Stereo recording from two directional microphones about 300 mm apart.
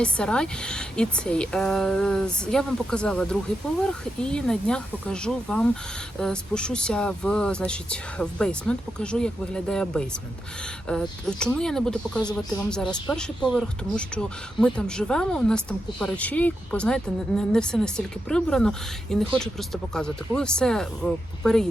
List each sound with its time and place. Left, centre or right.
0.0 s speech: centre